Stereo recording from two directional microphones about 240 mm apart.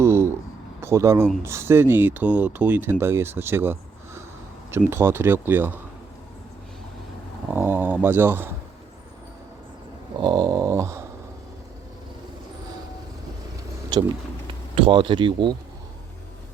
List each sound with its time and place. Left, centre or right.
0.0 s a sound: centre
0.8 s speech: centre
7.5 s speech: centre
10.2 s speech: centre
13.9 s speech: centre